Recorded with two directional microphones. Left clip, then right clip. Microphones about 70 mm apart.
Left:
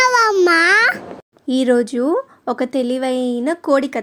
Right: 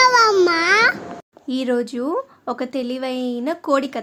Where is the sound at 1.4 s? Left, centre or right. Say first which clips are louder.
Left 6 dB; left.